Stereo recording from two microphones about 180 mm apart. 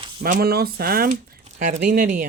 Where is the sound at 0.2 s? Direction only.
55° right (ahead or behind).